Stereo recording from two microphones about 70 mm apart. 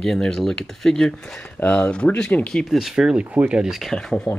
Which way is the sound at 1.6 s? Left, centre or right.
Centre.